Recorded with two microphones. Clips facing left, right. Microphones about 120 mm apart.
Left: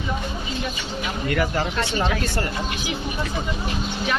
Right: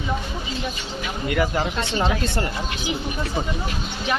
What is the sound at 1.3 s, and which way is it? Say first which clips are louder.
Speech: right 1 dB; 15° right (ahead or behind).